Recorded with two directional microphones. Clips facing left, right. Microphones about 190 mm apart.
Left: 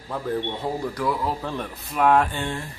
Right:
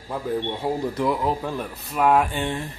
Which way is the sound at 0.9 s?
20° right (ahead or behind).